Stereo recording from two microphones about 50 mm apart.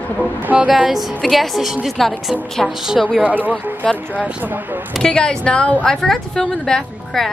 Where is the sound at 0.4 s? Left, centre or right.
Right.